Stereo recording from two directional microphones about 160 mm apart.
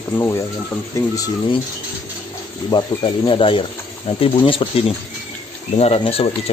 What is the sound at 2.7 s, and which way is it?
Speech, 35° left (ahead or behind).